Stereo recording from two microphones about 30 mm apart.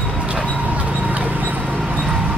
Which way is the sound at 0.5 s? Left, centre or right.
Right.